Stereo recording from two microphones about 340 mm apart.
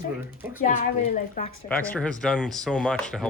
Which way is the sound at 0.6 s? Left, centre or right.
Left.